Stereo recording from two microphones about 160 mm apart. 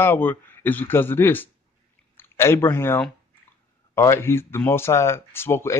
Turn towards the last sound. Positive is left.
turn(degrees=15)  # may be behind; listen again after turning